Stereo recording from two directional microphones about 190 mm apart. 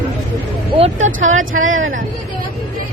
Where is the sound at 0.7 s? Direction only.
30° right (ahead or behind).